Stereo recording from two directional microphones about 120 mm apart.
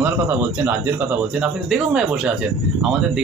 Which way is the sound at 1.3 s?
5° right (ahead or behind).